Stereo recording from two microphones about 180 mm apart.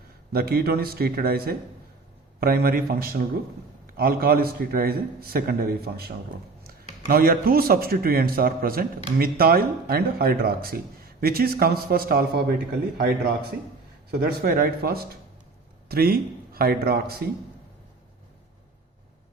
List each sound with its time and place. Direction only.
0.3 s speech: 60° right (ahead or behind)
14.1 s speech: 60° right (ahead or behind)